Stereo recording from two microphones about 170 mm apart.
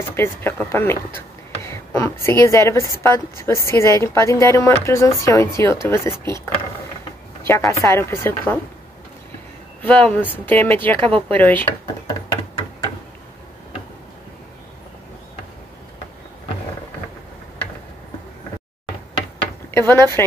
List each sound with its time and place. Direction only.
0.1 s speech: 15° left (ahead or behind)
9.8 s speech: 5° left (ahead or behind)
19.9 s speech: 15° left (ahead or behind)